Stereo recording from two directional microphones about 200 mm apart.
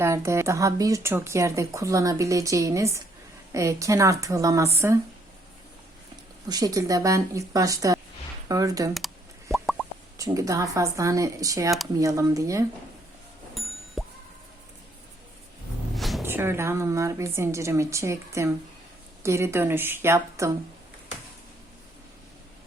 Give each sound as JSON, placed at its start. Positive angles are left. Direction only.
{"t": 0.0, "sound": "speech", "side_deg": -15}
{"t": 6.5, "sound": "speech", "side_deg": -20}
{"t": 9.5, "sound": "plop", "side_deg": 0}
{"t": 10.2, "sound": "speech", "side_deg": -15}
{"t": 13.5, "sound": "plop", "side_deg": 0}
{"t": 16.0, "sound": "a sound", "side_deg": 0}
{"t": 16.2, "sound": "speech", "side_deg": -10}